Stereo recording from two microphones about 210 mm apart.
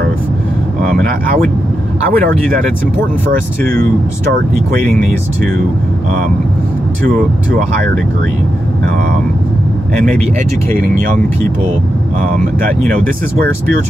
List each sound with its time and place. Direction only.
2.1 s speech: 5° left (ahead or behind)
10.7 s speech: 40° right (ahead or behind)